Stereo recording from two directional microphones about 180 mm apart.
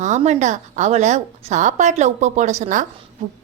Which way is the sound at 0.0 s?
40° right (ahead or behind).